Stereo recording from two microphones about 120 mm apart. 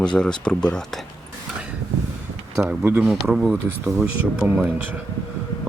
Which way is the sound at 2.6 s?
20° right (ahead or behind).